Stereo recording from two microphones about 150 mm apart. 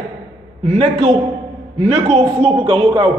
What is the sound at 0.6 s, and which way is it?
A man's voice, 45° right (ahead or behind).